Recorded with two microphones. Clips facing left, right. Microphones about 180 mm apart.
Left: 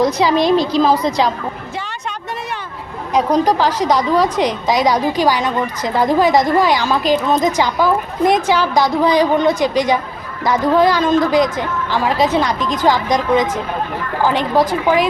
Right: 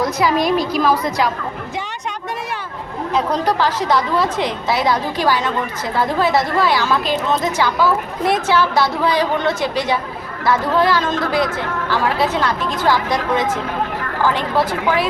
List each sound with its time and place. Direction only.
0.2 s a woman's voice: 30° left (ahead or behind)
3.2 s a woman's voice: 15° left (ahead or behind)